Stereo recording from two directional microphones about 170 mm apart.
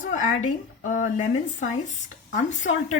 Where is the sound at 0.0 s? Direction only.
50° left (ahead or behind).